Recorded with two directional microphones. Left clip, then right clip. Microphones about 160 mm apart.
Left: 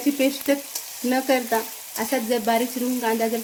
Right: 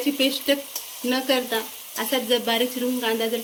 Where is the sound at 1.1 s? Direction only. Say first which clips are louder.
Left 2 dB; 50° left (ahead or behind).